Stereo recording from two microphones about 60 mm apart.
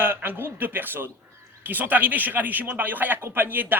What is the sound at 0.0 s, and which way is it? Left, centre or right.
Speech, right.